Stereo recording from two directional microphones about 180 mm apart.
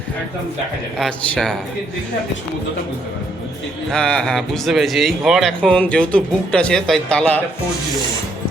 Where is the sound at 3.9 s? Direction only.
5° left (ahead or behind).